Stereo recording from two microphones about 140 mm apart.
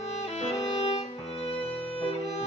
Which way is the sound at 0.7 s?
45° left (ahead or behind).